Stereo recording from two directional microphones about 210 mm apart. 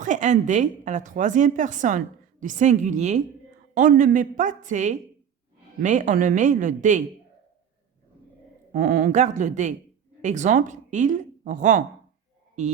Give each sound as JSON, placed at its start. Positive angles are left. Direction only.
{"t": 0.0, "sound": "a woman's voice", "side_deg": -35}
{"t": 8.7, "sound": "a woman's voice", "side_deg": -40}